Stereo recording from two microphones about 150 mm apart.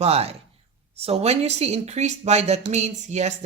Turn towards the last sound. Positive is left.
turn(degrees=-50)  # may be behind; listen again after turning